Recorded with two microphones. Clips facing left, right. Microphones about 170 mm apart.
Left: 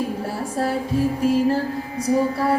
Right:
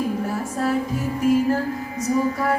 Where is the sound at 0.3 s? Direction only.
30° left (ahead or behind).